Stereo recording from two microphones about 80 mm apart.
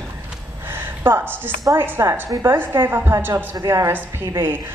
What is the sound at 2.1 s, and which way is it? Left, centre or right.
A woman's voice, right.